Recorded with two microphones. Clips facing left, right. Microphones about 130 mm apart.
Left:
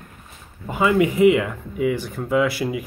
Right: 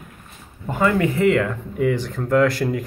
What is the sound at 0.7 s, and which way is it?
Speech, 10° left (ahead or behind).